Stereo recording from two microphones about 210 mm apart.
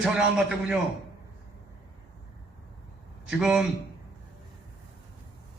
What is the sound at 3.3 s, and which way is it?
Speech, 5° right (ahead or behind).